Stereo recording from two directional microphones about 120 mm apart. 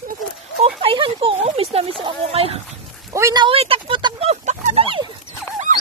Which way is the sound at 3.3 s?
40° right (ahead or behind).